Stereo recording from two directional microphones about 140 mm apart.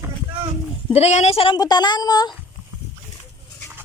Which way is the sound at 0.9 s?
50° left (ahead or behind).